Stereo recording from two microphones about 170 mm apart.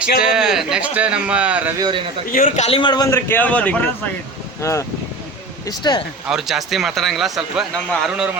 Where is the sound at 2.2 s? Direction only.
55° left (ahead or behind).